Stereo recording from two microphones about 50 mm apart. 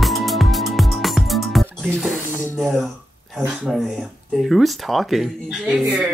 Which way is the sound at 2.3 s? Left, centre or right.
Left.